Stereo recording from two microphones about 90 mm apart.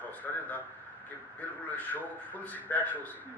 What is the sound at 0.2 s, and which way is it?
A man's voice, 15° left (ahead or behind).